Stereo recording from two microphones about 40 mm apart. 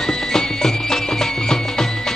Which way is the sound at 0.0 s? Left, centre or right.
Centre.